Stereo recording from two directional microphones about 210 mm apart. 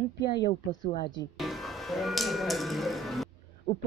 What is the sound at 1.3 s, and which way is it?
Music, centre (ahead or behind).